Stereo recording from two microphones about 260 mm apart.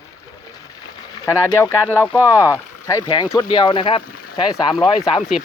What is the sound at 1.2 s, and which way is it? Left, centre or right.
Speech, centre.